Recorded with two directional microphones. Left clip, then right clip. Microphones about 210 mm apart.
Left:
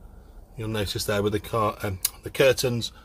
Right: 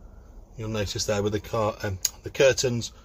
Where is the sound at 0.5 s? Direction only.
25° left (ahead or behind).